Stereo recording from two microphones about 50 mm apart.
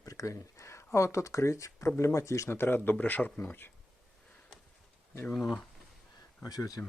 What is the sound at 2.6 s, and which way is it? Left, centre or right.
Speech, left.